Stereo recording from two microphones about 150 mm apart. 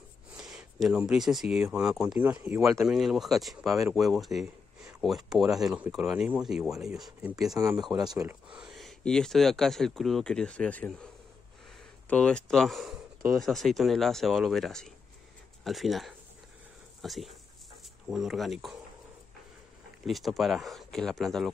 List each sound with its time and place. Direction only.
0.4 s speech: 5° right (ahead or behind)
7.5 s speech: 20° right (ahead or behind)
8.5 s speech: 5° right (ahead or behind)
12.1 s speech: 10° left (ahead or behind)
20.1 s speech: centre (ahead or behind)